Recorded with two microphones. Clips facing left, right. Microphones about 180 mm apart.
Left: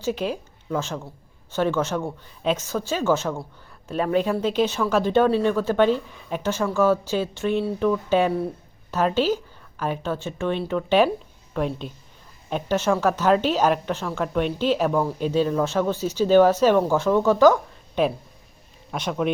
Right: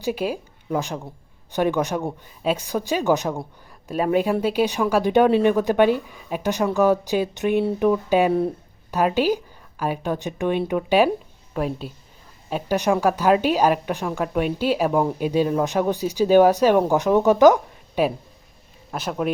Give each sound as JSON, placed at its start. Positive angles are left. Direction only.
{"t": 0.0, "sound": "a woman's voice", "side_deg": -10}